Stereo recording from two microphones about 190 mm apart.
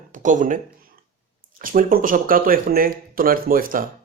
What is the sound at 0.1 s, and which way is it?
Speech, 40° right (ahead or behind).